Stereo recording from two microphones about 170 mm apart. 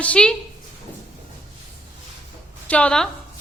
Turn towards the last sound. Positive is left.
turn(degrees=5)  # may be behind; listen again after turning